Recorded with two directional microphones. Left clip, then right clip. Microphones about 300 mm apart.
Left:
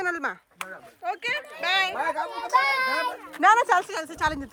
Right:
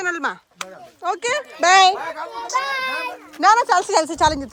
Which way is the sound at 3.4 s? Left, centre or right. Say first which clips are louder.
Right 4 dB; centre.